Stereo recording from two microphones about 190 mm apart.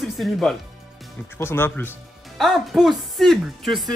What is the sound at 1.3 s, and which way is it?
Speech, 10° left (ahead or behind).